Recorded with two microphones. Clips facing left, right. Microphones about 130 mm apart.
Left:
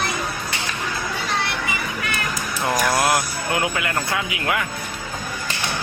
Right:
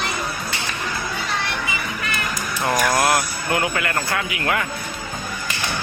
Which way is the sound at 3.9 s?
5° left (ahead or behind).